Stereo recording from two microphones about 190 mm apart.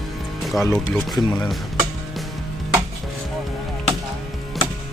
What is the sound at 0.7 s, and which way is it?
Speech, centre (ahead or behind).